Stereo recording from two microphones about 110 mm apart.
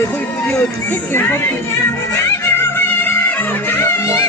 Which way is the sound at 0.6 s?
20° left (ahead or behind).